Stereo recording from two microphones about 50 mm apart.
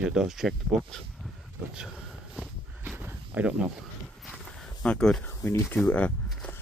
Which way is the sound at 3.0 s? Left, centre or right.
Right.